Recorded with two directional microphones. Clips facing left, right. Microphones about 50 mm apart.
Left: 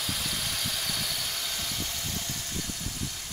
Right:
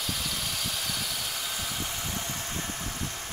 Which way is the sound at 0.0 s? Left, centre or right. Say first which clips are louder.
Even; centre.